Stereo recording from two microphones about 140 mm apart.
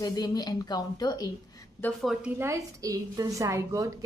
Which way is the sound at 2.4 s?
25° right (ahead or behind).